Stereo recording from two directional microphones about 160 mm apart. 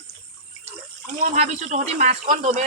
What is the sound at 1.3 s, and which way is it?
Speech, 45° right (ahead or behind).